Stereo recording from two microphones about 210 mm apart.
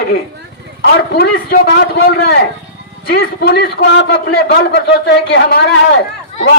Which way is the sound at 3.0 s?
45° left (ahead or behind).